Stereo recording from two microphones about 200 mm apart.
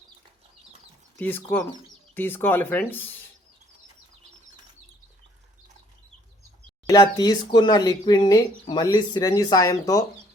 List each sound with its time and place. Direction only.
1.1 s speech: 10° left (ahead or behind)
6.8 s speech: 20° left (ahead or behind)